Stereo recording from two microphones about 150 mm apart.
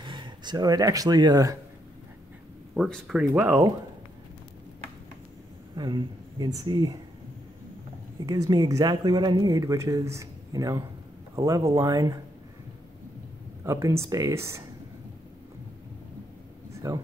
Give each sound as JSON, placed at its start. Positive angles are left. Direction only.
{"t": 0.0, "sound": "speech", "side_deg": -30}
{"t": 2.7, "sound": "speech", "side_deg": 0}
{"t": 3.2, "sound": "speech", "side_deg": -10}
{"t": 5.8, "sound": "speech", "side_deg": -30}
{"t": 8.3, "sound": "speech", "side_deg": -25}
{"t": 13.7, "sound": "speech", "side_deg": -20}
{"t": 16.7, "sound": "a sound", "side_deg": -20}